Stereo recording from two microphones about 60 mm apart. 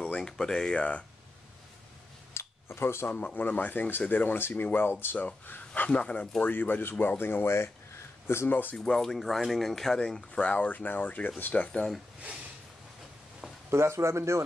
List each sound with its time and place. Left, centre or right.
0.0 s speech: centre
2.3 s a sound: left
3.2 s speech: left
5.9 s speech: centre
6.4 s speech: left
8.7 s speech: centre
10.5 s speech: left
13.7 s speech: right